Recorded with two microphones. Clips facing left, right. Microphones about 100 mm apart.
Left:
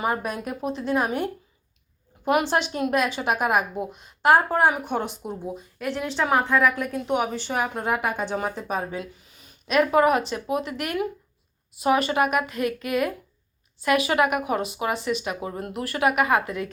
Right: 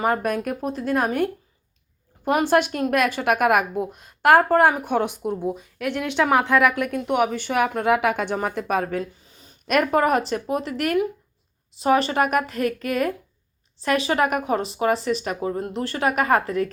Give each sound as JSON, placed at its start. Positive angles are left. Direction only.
{"t": 0.0, "sound": "a woman's voice", "side_deg": -55}
{"t": 7.7, "sound": "speech", "side_deg": -80}
{"t": 8.2, "sound": "speech", "side_deg": -55}
{"t": 9.2, "sound": "a sound", "side_deg": -30}
{"t": 9.6, "sound": "a woman's voice", "side_deg": -50}